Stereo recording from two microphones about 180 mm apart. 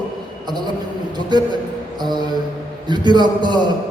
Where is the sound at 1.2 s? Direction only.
25° right (ahead or behind).